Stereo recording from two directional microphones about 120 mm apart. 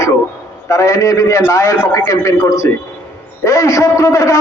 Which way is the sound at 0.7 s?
25° left (ahead or behind).